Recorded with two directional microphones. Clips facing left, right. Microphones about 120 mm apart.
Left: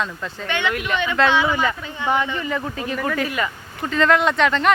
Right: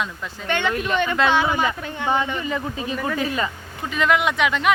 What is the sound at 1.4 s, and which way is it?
Speech, 15° right (ahead or behind).